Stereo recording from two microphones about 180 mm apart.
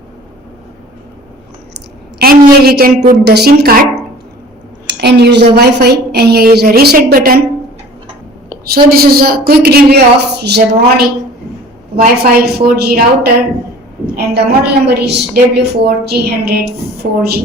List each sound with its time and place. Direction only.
2.2 s a woman's voice: 55° right (ahead or behind)
4.9 s a woman's voice: 65° right (ahead or behind)
9.0 s a woman's voice: 55° right (ahead or behind)
11.9 s a woman's voice: 55° right (ahead or behind)